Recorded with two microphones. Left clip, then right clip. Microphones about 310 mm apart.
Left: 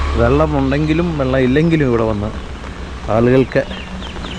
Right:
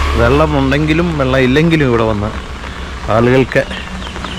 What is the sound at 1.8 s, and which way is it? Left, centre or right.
Speech, centre.